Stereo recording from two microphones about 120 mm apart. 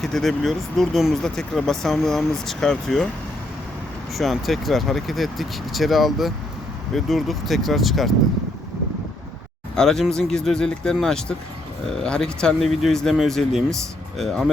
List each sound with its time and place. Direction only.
0.0 s speech: centre (ahead or behind)
4.1 s speech: centre (ahead or behind)
9.7 s speech: 5° left (ahead or behind)